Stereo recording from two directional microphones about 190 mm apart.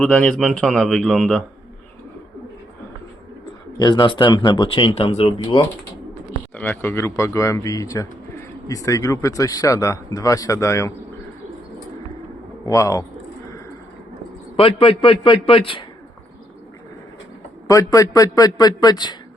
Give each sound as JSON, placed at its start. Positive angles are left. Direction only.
{"t": 0.0, "sound": "a man's voice", "side_deg": 5}
{"t": 3.8, "sound": "speech", "side_deg": 25}
{"t": 6.6, "sound": "speech", "side_deg": 10}
{"t": 12.6, "sound": "speech", "side_deg": 15}
{"t": 14.5, "sound": "speech", "side_deg": 30}
{"t": 17.7, "sound": "speech", "side_deg": 15}